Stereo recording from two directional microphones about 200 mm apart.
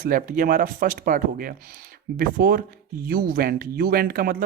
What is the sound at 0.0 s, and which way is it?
Speech, 45° right (ahead or behind).